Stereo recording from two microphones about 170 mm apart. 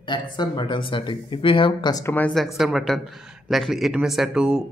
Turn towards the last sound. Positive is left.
turn(degrees=-5)  # may be behind; listen again after turning